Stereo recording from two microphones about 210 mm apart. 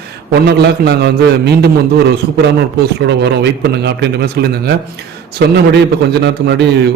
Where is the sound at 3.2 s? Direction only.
55° right (ahead or behind).